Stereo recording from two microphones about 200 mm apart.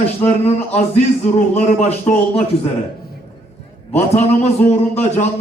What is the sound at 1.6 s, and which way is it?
Speech, 35° left (ahead or behind).